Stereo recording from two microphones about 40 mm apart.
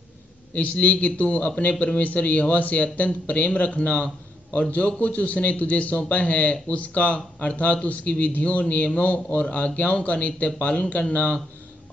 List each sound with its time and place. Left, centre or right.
0.6 s a man's voice: left